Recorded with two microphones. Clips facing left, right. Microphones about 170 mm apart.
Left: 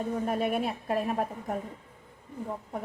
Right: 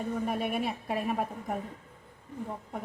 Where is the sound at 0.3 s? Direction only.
Centre (ahead or behind).